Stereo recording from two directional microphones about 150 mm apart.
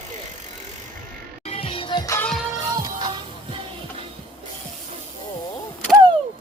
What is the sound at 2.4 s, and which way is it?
Music, 20° right (ahead or behind).